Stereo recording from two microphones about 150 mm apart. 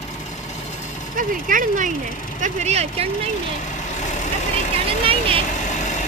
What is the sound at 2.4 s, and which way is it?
Speech, 50° right (ahead or behind).